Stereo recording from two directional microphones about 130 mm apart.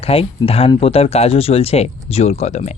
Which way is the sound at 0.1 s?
50° left (ahead or behind).